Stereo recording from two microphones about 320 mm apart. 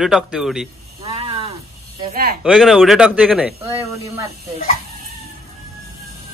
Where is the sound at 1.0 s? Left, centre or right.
Centre.